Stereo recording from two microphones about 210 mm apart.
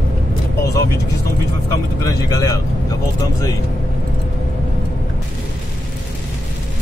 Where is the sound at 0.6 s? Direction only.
15° left (ahead or behind).